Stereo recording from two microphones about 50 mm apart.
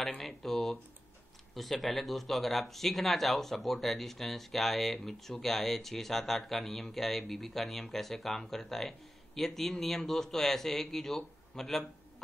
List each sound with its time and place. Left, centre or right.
0.4 s speech: centre